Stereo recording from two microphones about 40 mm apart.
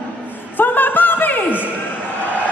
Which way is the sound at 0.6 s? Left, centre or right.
Left.